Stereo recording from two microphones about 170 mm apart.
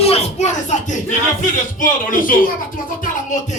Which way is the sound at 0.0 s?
40° left (ahead or behind).